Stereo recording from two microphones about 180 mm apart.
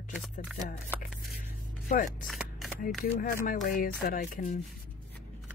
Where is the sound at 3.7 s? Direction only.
50° left (ahead or behind).